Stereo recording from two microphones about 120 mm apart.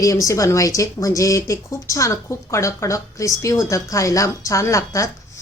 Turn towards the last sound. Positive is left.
turn(degrees=25)  # may be behind; listen again after turning